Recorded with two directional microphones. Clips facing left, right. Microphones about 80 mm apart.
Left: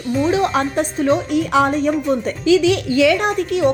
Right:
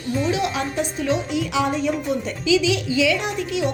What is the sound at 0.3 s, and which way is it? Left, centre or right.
A woman's voice, left.